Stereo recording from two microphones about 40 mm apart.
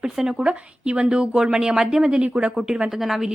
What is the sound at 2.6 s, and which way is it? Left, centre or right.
Speech, centre.